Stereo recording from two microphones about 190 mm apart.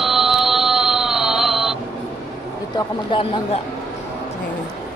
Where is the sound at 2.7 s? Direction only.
25° left (ahead or behind).